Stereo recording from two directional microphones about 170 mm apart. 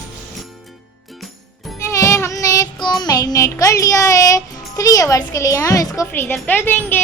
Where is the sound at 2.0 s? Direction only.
15° left (ahead or behind).